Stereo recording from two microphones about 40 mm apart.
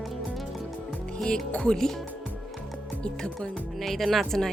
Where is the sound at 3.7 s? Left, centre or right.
Centre.